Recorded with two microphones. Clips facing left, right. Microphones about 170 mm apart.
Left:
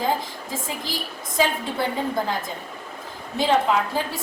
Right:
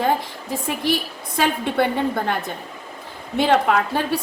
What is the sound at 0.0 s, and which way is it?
A woman's voice, 65° right (ahead or behind).